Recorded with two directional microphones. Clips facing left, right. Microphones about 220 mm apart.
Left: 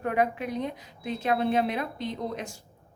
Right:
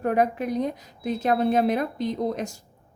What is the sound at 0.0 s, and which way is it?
A woman's voice, 40° right (ahead or behind).